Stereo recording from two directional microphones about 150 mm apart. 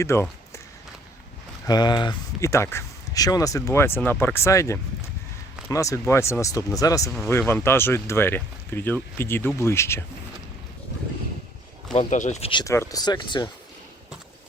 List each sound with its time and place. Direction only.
0.0 s speech: 20° left (ahead or behind)
1.6 s speech: 30° left (ahead or behind)
2.4 s speech: 20° left (ahead or behind)
11.9 s speech: 50° left (ahead or behind)
12.6 s speech: 20° left (ahead or behind)